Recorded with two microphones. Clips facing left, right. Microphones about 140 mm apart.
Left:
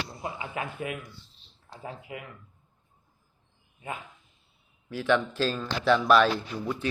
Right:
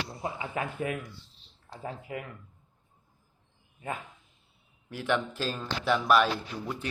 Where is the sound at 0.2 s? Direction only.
35° right (ahead or behind).